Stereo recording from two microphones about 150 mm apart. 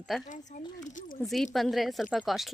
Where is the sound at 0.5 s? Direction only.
55° left (ahead or behind).